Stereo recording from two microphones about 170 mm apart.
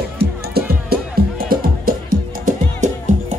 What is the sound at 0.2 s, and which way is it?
Music, 65° right (ahead or behind).